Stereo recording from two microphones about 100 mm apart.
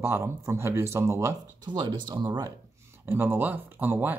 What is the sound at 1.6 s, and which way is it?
Speech, 55° right (ahead or behind).